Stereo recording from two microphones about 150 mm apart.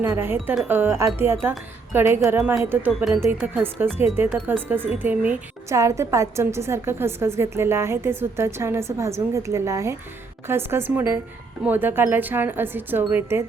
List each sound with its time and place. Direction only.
0.0 s a woman's voice: 15° right (ahead or behind)
3.2 s a woman's voice: 15° right (ahead or behind)